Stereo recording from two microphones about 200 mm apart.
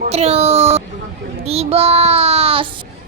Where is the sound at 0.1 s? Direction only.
30° right (ahead or behind).